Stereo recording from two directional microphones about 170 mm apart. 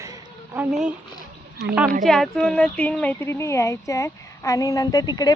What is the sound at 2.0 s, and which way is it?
Speech, centre (ahead or behind).